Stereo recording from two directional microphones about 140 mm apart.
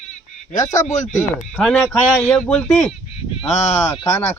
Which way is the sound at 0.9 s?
60° left (ahead or behind).